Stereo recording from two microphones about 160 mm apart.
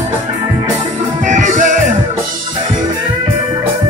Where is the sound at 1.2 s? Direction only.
50° right (ahead or behind).